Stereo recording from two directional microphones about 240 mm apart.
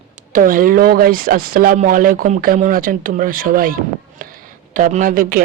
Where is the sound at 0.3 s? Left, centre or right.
Right.